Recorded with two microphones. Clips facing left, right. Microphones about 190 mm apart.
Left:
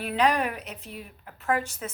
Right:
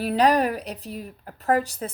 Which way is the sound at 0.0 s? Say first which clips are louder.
Right 5 dB; 35° right (ahead or behind).